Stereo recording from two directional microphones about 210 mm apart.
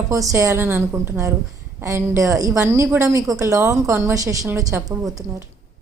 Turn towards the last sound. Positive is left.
turn(degrees=-15)  # may be behind; listen again after turning